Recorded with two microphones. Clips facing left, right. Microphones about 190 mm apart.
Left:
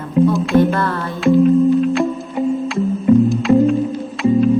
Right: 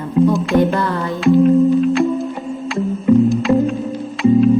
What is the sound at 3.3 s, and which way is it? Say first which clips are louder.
Music: left 2 dB; centre (ahead or behind).